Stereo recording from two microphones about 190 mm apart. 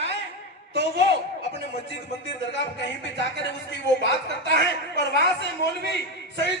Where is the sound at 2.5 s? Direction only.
70° left (ahead or behind).